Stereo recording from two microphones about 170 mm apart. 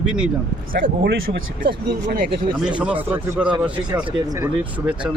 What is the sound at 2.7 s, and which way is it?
Speech, 10° right (ahead or behind).